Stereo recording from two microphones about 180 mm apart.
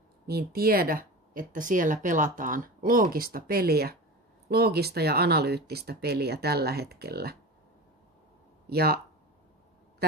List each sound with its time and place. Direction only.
0.3 s speech: 60° right (ahead or behind)
8.6 s speech: 60° right (ahead or behind)